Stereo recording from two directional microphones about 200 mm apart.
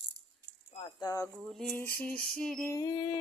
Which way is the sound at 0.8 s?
20° left (ahead or behind).